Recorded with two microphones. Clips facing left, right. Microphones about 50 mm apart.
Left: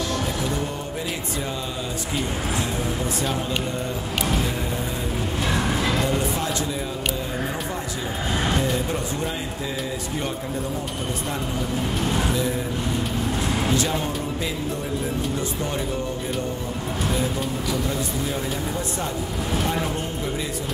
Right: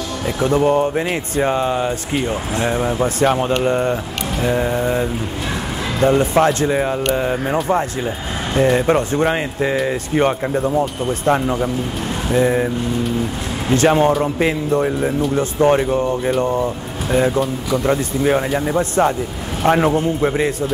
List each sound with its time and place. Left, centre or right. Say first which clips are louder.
0.4 s speech: right 12 dB; right
8.6 s speech: right 10 dB; right
13.7 s speech: right 10 dB; right
15.3 s speech: right 12 dB; right
17.6 s speech: right 8 dB; right